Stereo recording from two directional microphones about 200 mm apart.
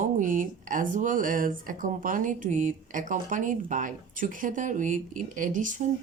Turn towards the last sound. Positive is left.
turn(degrees=-40)  # may be behind; listen again after turning